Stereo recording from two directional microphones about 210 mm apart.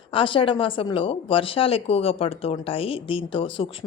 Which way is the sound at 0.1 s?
25° left (ahead or behind).